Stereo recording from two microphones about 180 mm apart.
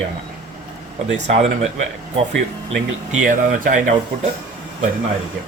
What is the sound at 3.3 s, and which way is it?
Speech, 45° right (ahead or behind).